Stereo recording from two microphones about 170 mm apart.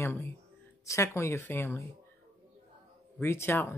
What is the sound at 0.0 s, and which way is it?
Speech, 15° left (ahead or behind).